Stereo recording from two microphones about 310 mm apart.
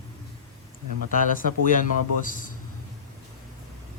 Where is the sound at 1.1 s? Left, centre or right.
Left.